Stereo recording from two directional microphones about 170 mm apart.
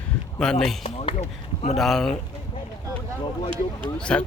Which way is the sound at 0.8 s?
40° left (ahead or behind).